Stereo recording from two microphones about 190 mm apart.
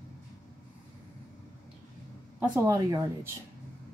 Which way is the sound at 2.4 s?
10° right (ahead or behind).